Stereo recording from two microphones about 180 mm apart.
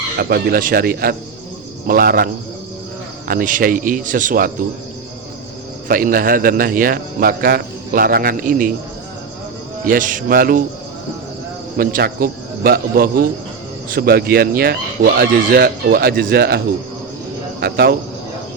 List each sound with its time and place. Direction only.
0.2 s a man's voice: 60° right (ahead or behind)
5.9 s a man's voice: 50° right (ahead or behind)
9.8 s a man's voice: 50° right (ahead or behind)
11.8 s speech: 55° right (ahead or behind)
17.6 s speech: 60° right (ahead or behind)